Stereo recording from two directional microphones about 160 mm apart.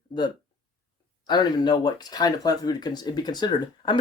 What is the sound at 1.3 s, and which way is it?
Speech, 25° left (ahead or behind).